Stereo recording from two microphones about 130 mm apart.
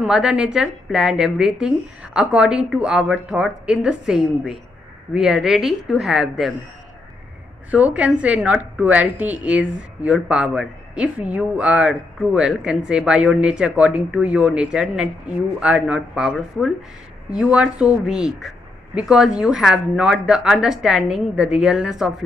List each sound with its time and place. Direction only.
0.0 s speech: 5° right (ahead or behind)
7.7 s a woman's voice: 10° right (ahead or behind)